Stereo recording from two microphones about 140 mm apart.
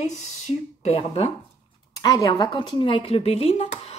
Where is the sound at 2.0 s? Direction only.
25° left (ahead or behind); by 3.7 s 45° left (ahead or behind).